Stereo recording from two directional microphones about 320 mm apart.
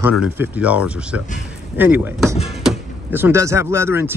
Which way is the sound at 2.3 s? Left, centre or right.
Centre.